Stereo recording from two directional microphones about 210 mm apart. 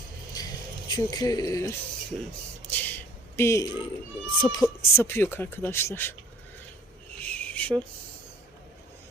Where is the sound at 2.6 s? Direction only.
10° left (ahead or behind).